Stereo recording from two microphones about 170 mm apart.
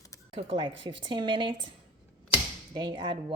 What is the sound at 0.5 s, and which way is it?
Speech, 30° right (ahead or behind).